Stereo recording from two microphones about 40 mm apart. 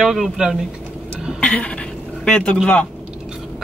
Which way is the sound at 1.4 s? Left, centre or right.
Left.